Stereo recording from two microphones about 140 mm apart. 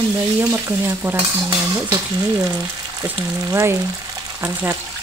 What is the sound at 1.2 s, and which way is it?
Cutlery, 40° right (ahead or behind).